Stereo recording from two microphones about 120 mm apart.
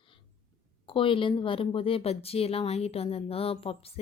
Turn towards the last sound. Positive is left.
turn(degrees=50)  # may be behind; listen again after turning